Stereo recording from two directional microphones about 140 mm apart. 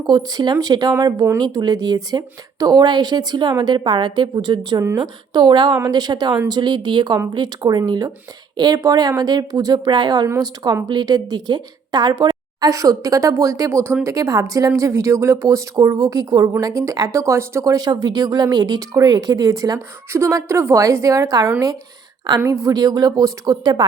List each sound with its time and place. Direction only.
0.1 s a woman's voice: 30° right (ahead or behind)